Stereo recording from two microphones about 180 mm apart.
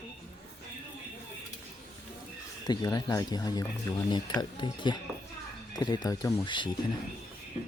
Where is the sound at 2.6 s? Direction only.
20° left (ahead or behind).